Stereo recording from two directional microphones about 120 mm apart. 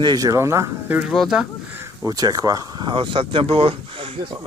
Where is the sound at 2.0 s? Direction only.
30° right (ahead or behind); by 4.3 s 50° right (ahead or behind).